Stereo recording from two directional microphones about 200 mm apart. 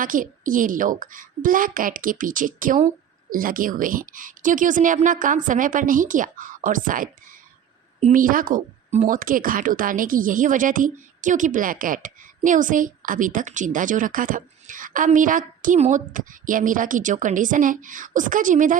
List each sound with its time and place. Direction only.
0.0 s a woman's voice: 40° right (ahead or behind)